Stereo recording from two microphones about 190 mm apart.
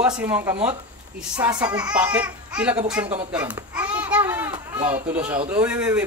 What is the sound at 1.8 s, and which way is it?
Speech, 5° right (ahead or behind).